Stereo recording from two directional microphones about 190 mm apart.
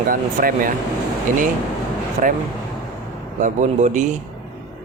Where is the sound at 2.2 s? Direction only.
40° right (ahead or behind).